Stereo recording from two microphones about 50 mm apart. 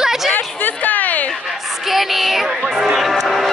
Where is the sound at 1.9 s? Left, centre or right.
Centre.